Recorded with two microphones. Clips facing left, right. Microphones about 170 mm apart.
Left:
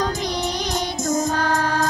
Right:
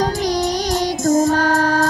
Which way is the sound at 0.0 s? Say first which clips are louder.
Right 5 dB; 35° right (ahead or behind).